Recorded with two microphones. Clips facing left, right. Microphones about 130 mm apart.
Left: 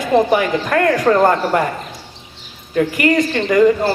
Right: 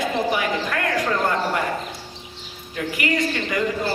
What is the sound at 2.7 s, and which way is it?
Speech, 50° left (ahead or behind).